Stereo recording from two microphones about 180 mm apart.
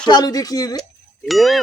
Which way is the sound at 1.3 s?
Centre (ahead or behind).